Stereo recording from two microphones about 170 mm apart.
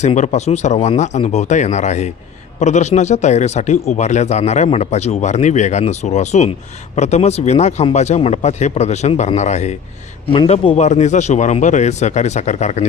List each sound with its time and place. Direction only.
0.0 s speech: 40° left (ahead or behind)